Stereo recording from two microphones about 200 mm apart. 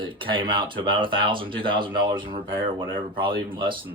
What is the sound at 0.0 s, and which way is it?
Speech, 25° right (ahead or behind).